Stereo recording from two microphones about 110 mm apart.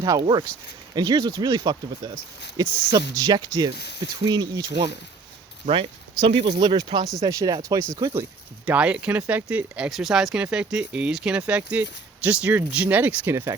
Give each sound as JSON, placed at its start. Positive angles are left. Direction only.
{"t": 0.0, "sound": "speech", "side_deg": -35}
{"t": 5.6, "sound": "speech", "side_deg": -55}
{"t": 8.1, "sound": "speech", "side_deg": -15}
{"t": 13.3, "sound": "speech", "side_deg": -25}